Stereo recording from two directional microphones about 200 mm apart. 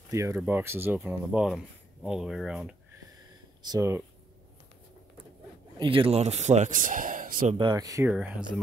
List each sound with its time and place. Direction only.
0.1 s speech: 15° right (ahead or behind)
3.6 s speech: 15° right (ahead or behind)
5.8 s speech: 25° right (ahead or behind); by 7.5 s 45° right (ahead or behind)
7.5 s speech: 20° right (ahead or behind)
8.1 s speech: 5° right (ahead or behind)